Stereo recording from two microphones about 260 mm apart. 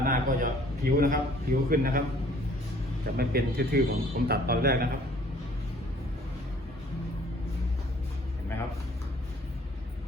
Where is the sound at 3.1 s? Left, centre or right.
Right.